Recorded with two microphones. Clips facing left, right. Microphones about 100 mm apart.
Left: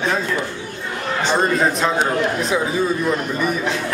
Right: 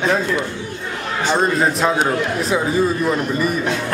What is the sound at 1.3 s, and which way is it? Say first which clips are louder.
A man's voice: right 1 dB; centre (ahead or behind).